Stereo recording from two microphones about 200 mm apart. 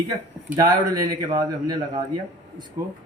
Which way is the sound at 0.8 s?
20° right (ahead or behind).